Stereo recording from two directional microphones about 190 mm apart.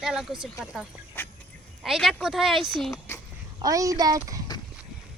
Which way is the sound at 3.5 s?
20° right (ahead or behind).